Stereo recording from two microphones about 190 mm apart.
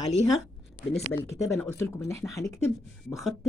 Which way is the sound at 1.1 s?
15° left (ahead or behind).